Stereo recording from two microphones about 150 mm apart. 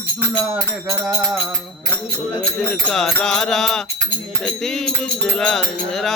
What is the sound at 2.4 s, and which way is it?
Music, 5° left (ahead or behind).